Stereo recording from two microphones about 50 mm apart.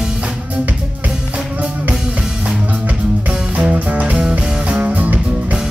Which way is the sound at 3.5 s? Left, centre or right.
Right.